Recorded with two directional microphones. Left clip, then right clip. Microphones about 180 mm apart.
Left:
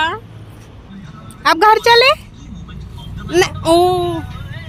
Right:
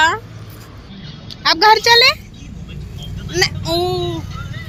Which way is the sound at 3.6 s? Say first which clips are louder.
Left 7 dB; 45° left (ahead or behind).